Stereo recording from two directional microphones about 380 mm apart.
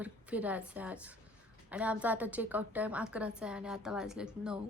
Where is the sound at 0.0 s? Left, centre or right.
Centre.